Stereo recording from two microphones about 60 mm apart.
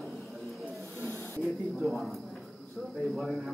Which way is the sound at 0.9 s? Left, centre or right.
Right.